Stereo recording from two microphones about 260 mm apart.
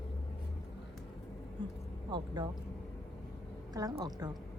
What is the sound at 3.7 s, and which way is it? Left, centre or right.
Speech, centre.